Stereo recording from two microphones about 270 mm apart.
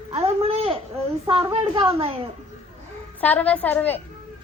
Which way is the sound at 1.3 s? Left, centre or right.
Centre.